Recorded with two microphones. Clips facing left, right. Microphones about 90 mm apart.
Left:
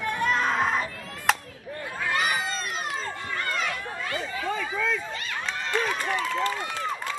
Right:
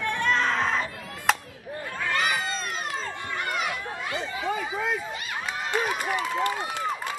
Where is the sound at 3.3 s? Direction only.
15° right (ahead or behind).